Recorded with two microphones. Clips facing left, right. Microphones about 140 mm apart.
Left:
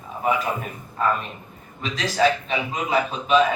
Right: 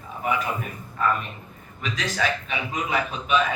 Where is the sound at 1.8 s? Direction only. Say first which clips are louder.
Left 5 dB; 30° left (ahead or behind).